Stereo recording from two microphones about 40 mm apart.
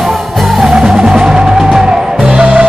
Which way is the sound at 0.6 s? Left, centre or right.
Centre.